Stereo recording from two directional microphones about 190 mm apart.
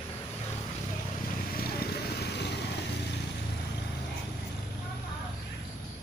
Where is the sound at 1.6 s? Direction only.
55° left (ahead or behind).